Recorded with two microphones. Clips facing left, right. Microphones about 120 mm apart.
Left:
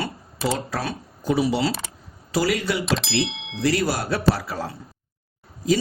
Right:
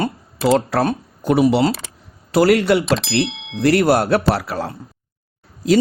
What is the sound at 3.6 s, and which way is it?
Speech, 65° right (ahead or behind).